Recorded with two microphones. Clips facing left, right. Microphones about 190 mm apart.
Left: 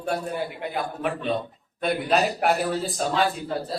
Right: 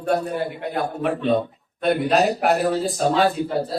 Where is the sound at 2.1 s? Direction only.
Centre (ahead or behind).